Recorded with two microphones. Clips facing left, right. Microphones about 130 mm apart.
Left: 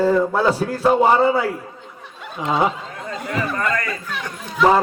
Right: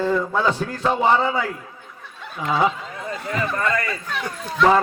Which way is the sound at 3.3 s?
5° left (ahead or behind).